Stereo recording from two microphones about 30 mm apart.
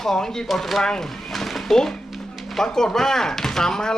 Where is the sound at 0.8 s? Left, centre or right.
Left.